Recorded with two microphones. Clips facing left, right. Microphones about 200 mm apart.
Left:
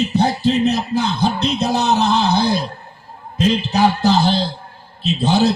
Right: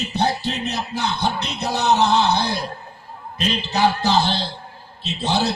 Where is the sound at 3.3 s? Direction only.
55° left (ahead or behind).